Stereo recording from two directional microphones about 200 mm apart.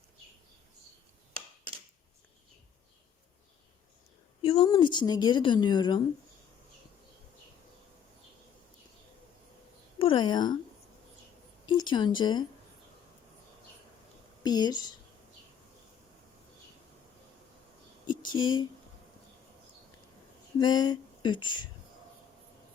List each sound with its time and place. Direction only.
4.4 s a woman's voice: 25° left (ahead or behind)
10.0 s speech: 25° left (ahead or behind)
11.6 s a woman's voice: 20° left (ahead or behind)
14.4 s a woman's voice: 20° left (ahead or behind)
18.0 s a sound: 25° left (ahead or behind)
20.6 s a woman's voice: 20° left (ahead or behind)